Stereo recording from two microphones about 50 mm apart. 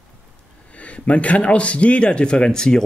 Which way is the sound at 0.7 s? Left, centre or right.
Left.